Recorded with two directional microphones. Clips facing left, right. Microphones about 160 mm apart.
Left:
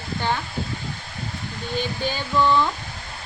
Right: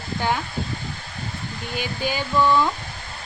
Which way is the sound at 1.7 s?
10° right (ahead or behind).